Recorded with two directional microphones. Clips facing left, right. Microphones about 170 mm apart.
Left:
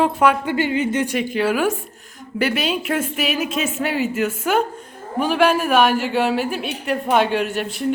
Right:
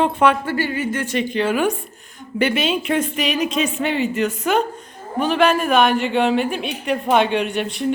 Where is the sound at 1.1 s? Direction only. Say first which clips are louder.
Even; 5° left (ahead or behind).